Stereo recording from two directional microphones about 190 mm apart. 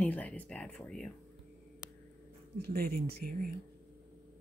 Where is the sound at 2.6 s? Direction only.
55° right (ahead or behind).